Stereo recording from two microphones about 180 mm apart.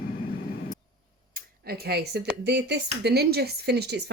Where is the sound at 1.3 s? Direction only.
60° right (ahead or behind).